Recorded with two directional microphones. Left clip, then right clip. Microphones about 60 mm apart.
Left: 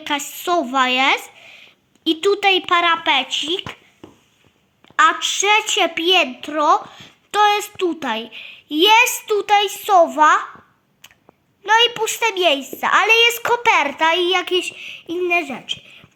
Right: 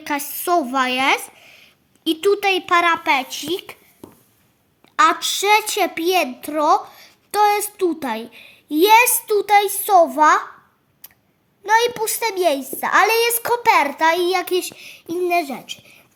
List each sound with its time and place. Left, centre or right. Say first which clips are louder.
0.1 s a child's voice: even; right
0.6 s speech: left 2 dB; centre
0.9 s a sound: left 2 dB; centre
2.5 s speech: left 2 dB; centre
3.5 s a woman's voice: left 2 dB; right
4.9 s a child's voice: left 1 dB; right
7.9 s a woman's voice: left 1 dB; right
11.6 s a child's voice: left 2 dB; right
14.0 s a woman's voice: left 1 dB; right